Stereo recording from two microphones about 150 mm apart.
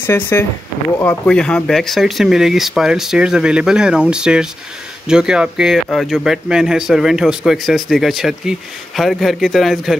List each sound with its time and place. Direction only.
0.0 s speech: 15° left (ahead or behind); by 9.9 s centre (ahead or behind)